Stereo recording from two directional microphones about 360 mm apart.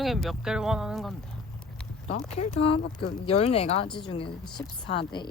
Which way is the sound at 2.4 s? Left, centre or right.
Centre.